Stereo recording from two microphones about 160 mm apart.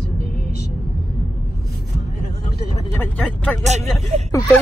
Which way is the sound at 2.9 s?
10° left (ahead or behind).